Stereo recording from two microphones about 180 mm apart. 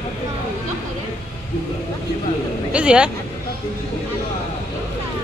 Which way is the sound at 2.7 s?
5° right (ahead or behind).